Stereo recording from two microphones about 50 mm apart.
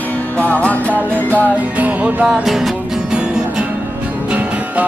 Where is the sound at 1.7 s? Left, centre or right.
Right.